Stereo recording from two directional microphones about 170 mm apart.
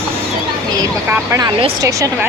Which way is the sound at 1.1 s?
20° right (ahead or behind).